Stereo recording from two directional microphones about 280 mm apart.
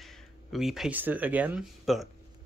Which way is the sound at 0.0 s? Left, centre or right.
Centre.